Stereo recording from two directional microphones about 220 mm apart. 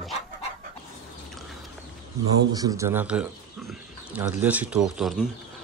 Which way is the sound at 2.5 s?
15° right (ahead or behind).